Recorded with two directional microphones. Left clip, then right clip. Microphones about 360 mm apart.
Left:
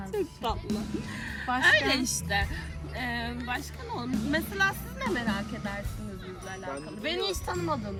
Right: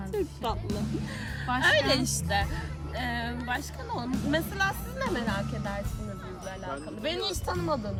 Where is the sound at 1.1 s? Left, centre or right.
Centre.